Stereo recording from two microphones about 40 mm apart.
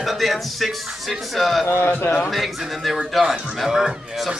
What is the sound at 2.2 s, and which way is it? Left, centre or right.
A man's voice, centre.